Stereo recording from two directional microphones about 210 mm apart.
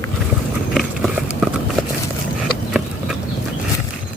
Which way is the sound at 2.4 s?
Centre (ahead or behind).